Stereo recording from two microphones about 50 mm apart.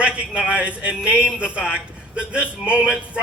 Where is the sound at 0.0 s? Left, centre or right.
Right.